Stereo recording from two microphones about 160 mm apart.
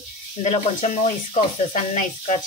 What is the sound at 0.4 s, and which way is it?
Speech, 50° left (ahead or behind).